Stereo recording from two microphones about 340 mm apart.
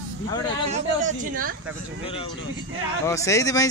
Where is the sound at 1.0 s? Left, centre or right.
Right.